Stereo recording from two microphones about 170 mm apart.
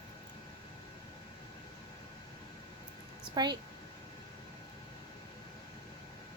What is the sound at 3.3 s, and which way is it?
Speech, 25° right (ahead or behind).